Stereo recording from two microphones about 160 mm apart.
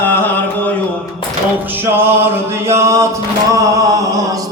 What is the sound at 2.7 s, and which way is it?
Music, 20° right (ahead or behind).